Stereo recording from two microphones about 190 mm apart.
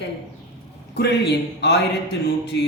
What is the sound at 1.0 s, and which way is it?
Speech, 60° left (ahead or behind).